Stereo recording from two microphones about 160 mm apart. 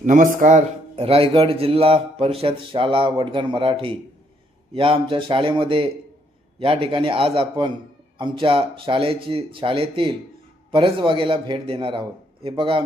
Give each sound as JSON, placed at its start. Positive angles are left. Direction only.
{"t": 0.0, "sound": "a man's voice", "side_deg": -55}